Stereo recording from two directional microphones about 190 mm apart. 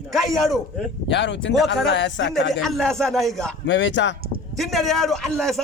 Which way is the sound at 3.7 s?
70° left (ahead or behind).